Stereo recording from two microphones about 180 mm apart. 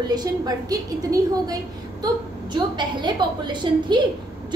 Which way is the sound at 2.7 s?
25° right (ahead or behind).